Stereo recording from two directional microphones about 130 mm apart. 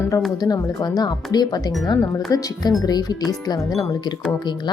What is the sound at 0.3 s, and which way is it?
A woman's voice, 30° left (ahead or behind).